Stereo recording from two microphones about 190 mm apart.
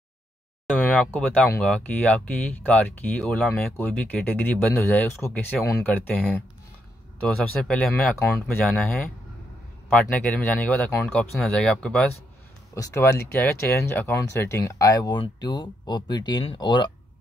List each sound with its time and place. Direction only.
0.7 s speech: 10° left (ahead or behind)
9.8 s speech: 5° left (ahead or behind)
12.7 s speech: 15° left (ahead or behind)